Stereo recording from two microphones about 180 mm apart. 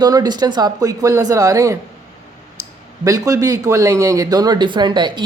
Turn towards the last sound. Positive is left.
turn(degrees=-25)  # may be behind; listen again after turning